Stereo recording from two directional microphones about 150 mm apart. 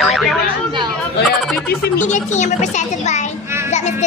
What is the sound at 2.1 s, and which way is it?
A child's voice, 50° left (ahead or behind).